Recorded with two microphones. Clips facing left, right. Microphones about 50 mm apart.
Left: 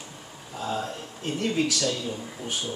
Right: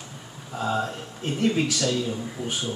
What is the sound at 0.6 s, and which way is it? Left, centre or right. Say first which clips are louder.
Speech: right 4 dB; centre.